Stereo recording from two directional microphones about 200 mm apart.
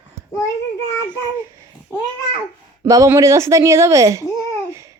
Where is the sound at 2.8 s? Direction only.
15° right (ahead or behind).